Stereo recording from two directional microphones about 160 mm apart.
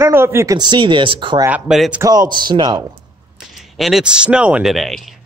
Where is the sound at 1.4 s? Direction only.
5° right (ahead or behind).